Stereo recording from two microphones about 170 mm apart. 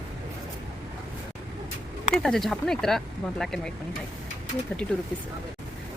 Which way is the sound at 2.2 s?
Centre (ahead or behind).